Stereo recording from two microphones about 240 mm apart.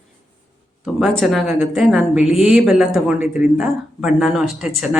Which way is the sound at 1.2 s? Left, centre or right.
Centre.